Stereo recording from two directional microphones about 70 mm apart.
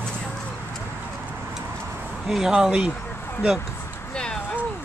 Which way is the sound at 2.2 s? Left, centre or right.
Centre.